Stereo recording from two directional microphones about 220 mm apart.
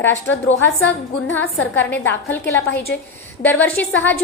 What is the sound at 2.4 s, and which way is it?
Speech, 50° left (ahead or behind).